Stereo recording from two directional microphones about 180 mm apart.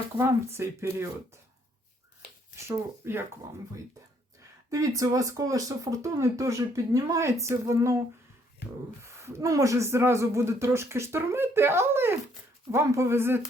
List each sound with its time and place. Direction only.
0.2 s speech: 15° right (ahead or behind)
2.6 s speech: 15° right (ahead or behind)
4.7 s speech: 20° right (ahead or behind)